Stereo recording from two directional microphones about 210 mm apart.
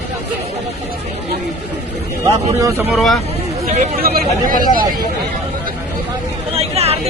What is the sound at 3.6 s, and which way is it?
Speech, 40° right (ahead or behind).